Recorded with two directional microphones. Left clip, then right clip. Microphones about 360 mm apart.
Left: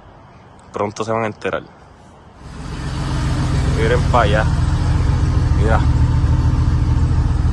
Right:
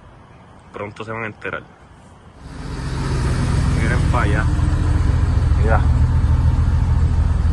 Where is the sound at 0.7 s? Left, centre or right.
Centre.